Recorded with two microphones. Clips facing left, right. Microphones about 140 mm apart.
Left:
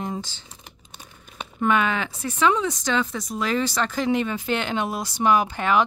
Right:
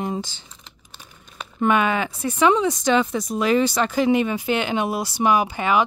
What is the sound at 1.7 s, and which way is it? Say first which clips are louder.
Speech: right 2 dB; 15° right (ahead or behind).